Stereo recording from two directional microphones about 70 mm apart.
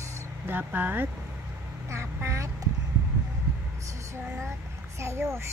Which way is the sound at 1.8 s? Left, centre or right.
Right.